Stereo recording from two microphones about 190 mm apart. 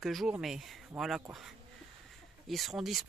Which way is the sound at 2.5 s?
Centre (ahead or behind).